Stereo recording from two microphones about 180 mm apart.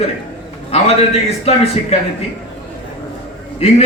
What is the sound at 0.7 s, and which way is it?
A man's voice, 35° left (ahead or behind).